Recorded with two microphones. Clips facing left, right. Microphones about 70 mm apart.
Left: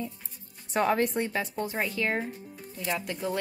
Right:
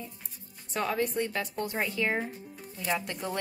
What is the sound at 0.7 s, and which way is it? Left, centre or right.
Speech, left.